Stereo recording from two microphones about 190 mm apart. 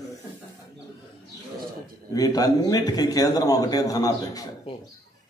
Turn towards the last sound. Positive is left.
turn(degrees=20)  # may be behind; listen again after turning